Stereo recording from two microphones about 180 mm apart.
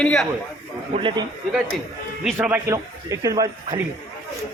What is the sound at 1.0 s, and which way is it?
Speech, 30° right (ahead or behind).